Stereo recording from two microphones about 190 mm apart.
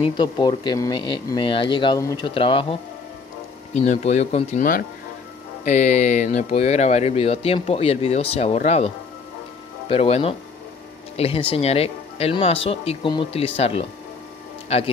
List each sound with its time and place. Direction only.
0.0 s speech: 20° left (ahead or behind)